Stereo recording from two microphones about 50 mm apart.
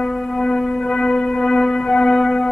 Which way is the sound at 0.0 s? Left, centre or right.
Centre.